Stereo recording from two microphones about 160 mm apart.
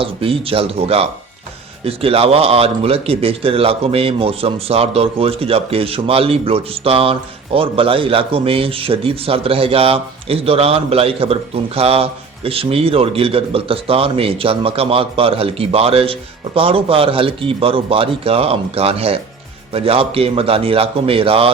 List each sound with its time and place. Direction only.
0.0 s speech: 35° right (ahead or behind)